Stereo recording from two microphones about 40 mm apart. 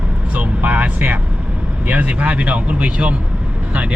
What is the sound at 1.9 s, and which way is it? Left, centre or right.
Speech, right.